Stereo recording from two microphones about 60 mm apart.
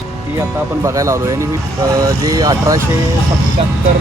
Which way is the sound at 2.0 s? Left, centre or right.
Right.